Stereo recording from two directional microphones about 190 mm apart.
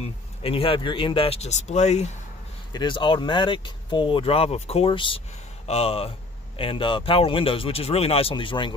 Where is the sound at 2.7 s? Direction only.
25° left (ahead or behind).